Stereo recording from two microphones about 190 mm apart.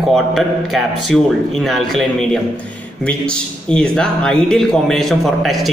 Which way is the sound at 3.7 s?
5° left (ahead or behind).